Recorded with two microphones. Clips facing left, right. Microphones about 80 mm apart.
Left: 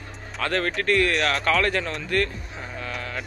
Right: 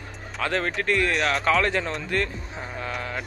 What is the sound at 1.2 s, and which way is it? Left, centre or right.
Speech, centre.